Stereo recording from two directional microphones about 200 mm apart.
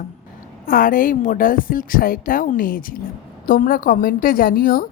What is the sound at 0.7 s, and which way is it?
Speech, 45° left (ahead or behind).